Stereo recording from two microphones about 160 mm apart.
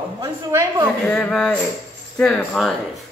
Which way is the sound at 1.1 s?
5° left (ahead or behind).